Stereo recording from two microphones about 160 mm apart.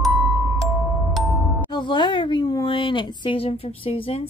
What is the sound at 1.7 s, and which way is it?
Speech, 30° left (ahead or behind).